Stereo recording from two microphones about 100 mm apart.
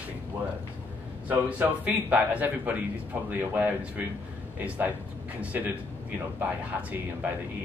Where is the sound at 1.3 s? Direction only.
15° right (ahead or behind).